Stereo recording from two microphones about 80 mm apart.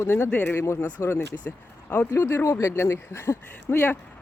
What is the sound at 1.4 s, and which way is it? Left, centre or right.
Speech, left.